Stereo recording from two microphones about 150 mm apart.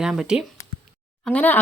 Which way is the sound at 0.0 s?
5° right (ahead or behind).